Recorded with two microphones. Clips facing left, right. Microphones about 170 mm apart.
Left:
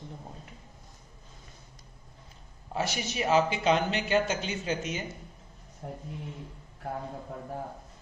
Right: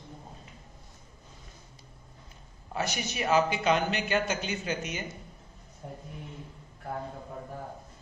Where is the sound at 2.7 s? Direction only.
30° left (ahead or behind).